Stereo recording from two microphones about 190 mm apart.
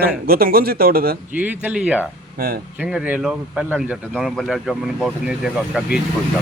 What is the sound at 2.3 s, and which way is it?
Speech, 50° right (ahead or behind).